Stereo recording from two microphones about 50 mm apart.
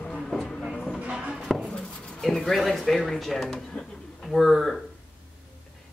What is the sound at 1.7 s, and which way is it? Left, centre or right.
Cutlery, left.